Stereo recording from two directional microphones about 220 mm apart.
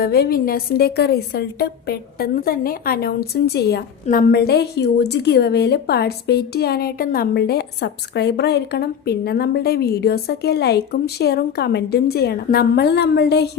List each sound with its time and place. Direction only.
0.0 s a woman's voice: 45° left (ahead or behind)